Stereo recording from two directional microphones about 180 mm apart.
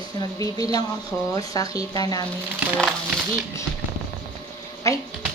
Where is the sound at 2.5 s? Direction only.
5° right (ahead or behind).